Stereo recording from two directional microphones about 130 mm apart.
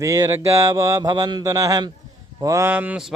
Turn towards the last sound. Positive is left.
turn(degrees=-15)  # may be behind; listen again after turning